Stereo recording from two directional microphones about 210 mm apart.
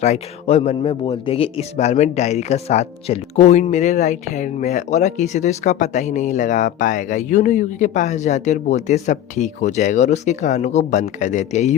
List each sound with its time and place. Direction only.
0.0 s a man's voice: 30° left (ahead or behind)